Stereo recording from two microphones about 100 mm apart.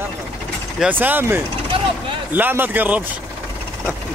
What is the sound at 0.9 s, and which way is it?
Speech, 20° right (ahead or behind).